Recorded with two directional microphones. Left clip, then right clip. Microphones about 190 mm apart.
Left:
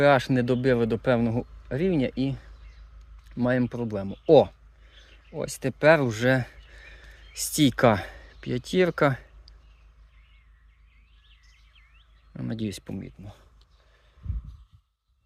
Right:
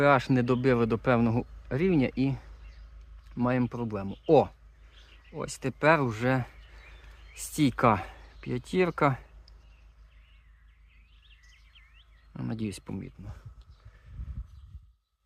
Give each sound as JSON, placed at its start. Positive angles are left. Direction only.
{"t": 0.0, "sound": "speech", "side_deg": 15}
{"t": 3.2, "sound": "speech", "side_deg": 15}
{"t": 12.3, "sound": "speech", "side_deg": 10}